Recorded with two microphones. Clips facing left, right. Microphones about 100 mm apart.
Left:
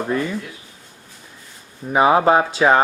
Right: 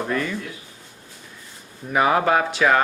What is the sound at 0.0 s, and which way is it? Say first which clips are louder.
Mantra: left 3 dB; 20° left (ahead or behind).